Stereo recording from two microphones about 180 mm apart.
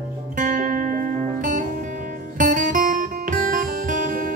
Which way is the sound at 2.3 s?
45° right (ahead or behind).